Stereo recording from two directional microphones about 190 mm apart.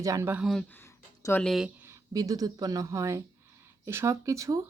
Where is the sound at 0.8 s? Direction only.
15° left (ahead or behind).